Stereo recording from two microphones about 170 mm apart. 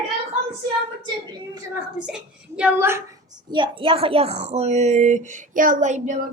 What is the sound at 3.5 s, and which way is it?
Speech, 30° right (ahead or behind).